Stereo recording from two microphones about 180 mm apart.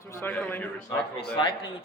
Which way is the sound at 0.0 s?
15° left (ahead or behind).